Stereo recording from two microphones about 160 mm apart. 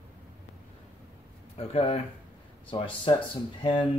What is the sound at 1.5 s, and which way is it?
Speech, 40° left (ahead or behind).